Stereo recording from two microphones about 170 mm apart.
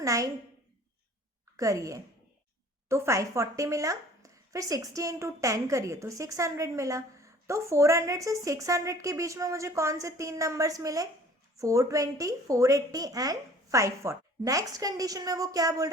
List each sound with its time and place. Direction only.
0.0 s a woman's voice: 20° right (ahead or behind)
1.5 s a woman's voice: 20° right (ahead or behind)